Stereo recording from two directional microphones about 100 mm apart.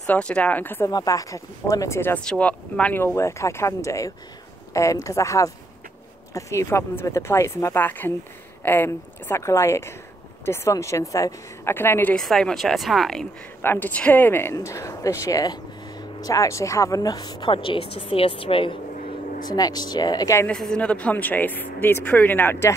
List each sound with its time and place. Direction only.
0.0 s speech: 10° left (ahead or behind)
0.8 s speech: 35° left (ahead or behind)
2.2 s speech: 10° left (ahead or behind)
3.0 s speech: 25° left (ahead or behind)
11.7 s speech: 20° left (ahead or behind)
12.2 s speech: 5° left (ahead or behind)
13.6 s speech: 20° left (ahead or behind); by 17.5 s 40° left (ahead or behind)
17.5 s a woman's voice: 60° left (ahead or behind)
19.4 s speech: 40° left (ahead or behind)
20.4 s speech: 10° left (ahead or behind); by 22.8 s 25° left (ahead or behind)